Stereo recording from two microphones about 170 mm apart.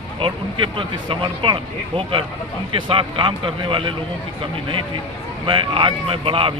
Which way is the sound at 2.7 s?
30° right (ahead or behind).